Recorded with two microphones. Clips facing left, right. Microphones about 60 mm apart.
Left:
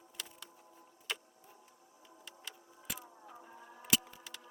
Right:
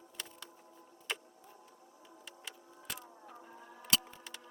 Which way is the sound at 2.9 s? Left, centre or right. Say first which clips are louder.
Even; centre.